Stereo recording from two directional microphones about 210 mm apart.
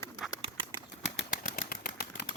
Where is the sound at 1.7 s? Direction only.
45° left (ahead or behind).